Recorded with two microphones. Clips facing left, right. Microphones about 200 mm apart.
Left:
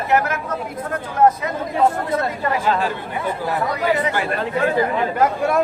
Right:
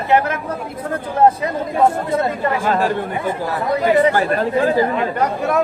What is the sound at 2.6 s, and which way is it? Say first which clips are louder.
Speech: right 2 dB; 50° right (ahead or behind).